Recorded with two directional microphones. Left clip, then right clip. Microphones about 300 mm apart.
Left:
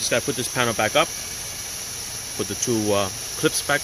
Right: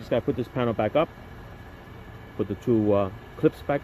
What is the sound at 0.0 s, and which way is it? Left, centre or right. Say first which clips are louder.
Speech: left 3 dB; centre.